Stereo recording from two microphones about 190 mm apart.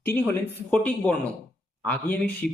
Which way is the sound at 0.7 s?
5° left (ahead or behind).